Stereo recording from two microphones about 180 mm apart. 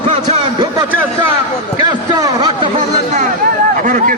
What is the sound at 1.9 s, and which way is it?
Speech, 25° right (ahead or behind).